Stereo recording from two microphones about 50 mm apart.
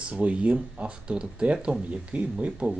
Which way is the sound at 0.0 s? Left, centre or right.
Right.